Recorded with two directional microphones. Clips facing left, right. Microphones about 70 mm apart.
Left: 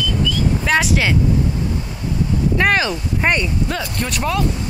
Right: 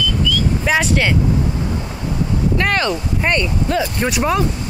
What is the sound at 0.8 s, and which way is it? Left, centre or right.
Speech, centre.